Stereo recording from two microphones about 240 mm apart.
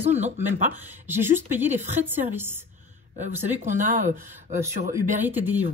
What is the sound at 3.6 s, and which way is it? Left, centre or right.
Speech, right.